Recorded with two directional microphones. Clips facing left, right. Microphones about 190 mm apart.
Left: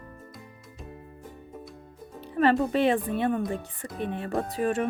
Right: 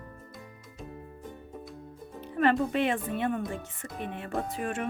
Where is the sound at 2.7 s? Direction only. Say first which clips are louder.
Left 4 dB; 35° left (ahead or behind).